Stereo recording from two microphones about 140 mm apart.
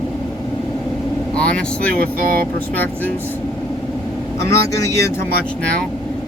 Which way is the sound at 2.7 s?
10° left (ahead or behind).